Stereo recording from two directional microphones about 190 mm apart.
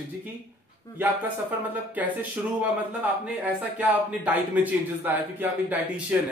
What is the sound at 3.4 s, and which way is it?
A man's voice, 10° right (ahead or behind).